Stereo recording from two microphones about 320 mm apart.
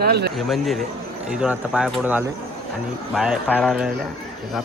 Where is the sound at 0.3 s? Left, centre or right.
Centre.